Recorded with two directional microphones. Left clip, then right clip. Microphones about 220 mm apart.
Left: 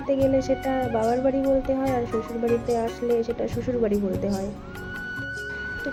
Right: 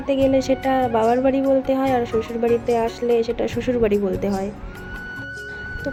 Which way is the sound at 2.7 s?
15° right (ahead or behind).